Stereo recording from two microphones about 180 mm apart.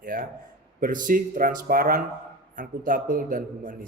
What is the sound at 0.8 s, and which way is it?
Speech, 50° right (ahead or behind).